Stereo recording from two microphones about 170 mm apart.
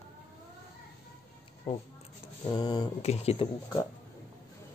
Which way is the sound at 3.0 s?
35° left (ahead or behind).